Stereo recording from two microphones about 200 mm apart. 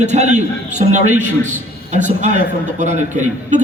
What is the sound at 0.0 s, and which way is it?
A man's voice, 35° right (ahead or behind).